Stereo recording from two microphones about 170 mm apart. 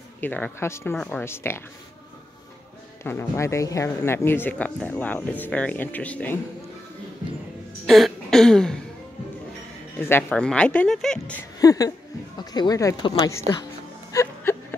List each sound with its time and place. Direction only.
0.2 s speech: 10° left (ahead or behind)
3.0 s speech: 15° left (ahead or behind)
7.8 s throat clearing: centre (ahead or behind)
9.9 s speech: 10° left (ahead or behind)
11.6 s speech: 20° left (ahead or behind)
14.1 s a sound: 15° left (ahead or behind)